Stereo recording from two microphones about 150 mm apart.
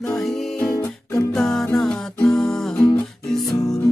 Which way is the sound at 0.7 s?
20° left (ahead or behind).